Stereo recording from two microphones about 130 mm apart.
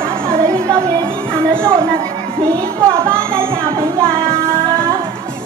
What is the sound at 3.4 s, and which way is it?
Music, 45° right (ahead or behind).